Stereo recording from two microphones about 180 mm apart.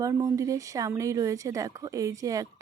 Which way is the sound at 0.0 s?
20° right (ahead or behind).